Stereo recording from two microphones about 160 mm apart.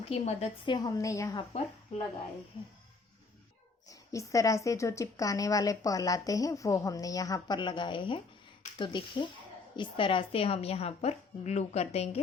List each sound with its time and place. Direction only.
0.0 s a woman's voice: 40° left (ahead or behind)
0.7 s a woman's voice: 20° left (ahead or behind)
3.8 s a woman's voice: 20° left (ahead or behind); by 12.2 s 40° left (ahead or behind)